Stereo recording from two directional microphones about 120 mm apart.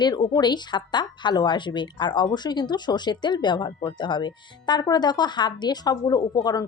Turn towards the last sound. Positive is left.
turn(degrees=35)  # may be behind; listen again after turning